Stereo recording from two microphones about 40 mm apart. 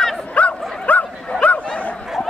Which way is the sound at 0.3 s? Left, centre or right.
Left.